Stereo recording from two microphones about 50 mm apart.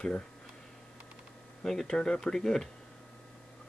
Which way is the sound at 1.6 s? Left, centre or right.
Centre.